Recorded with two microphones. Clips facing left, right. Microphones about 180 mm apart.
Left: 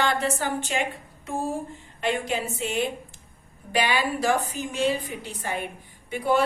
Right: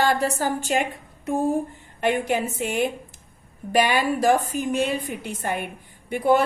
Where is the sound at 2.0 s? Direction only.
55° right (ahead or behind).